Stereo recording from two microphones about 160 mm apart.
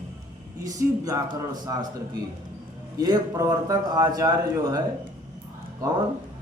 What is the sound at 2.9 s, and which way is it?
A man's voice, 20° right (ahead or behind).